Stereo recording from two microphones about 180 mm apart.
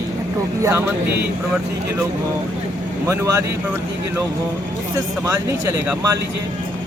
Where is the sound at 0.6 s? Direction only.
15° right (ahead or behind).